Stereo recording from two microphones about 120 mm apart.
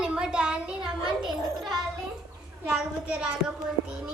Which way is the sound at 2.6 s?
5° right (ahead or behind).